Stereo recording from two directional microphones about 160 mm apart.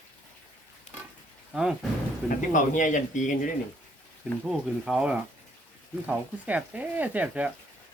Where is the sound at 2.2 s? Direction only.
50° left (ahead or behind).